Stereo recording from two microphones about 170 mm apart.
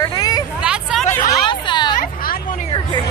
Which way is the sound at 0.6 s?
5° right (ahead or behind).